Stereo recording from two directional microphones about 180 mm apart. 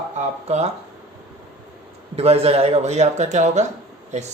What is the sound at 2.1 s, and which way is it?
Speech, 35° right (ahead or behind).